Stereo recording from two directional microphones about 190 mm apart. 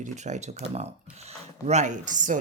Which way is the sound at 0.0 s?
40° right (ahead or behind).